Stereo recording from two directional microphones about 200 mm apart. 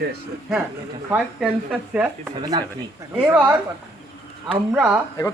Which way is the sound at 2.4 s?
20° right (ahead or behind).